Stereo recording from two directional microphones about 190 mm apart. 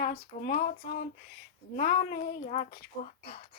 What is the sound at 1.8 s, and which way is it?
Speech, 50° left (ahead or behind).